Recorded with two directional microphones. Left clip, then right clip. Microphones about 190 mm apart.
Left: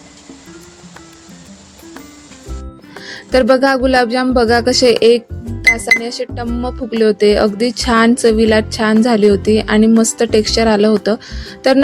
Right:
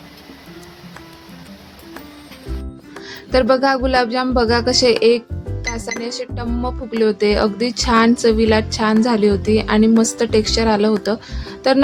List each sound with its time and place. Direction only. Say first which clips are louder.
3.0 s music: left 3 dB; 20° left (ahead or behind)
6.0 s speech: left 4 dB; 15° left (ahead or behind)